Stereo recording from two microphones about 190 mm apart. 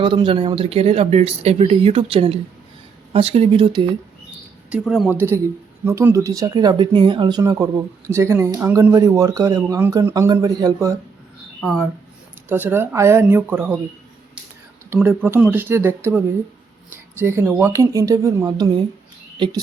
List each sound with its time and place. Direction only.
0.0 s speech: 25° right (ahead or behind)
4.7 s speech: 5° right (ahead or behind)
12.5 s speech: 10° right (ahead or behind)
14.8 s speech: 10° right (ahead or behind)